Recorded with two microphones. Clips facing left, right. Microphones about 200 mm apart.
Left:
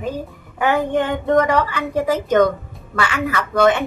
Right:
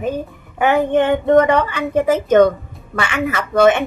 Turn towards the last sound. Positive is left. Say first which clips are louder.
# right 3 dB
turn(degrees=-25)  # may be behind; listen again after turning